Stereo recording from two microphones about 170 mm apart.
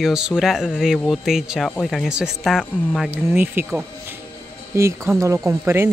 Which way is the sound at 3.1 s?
15° right (ahead or behind).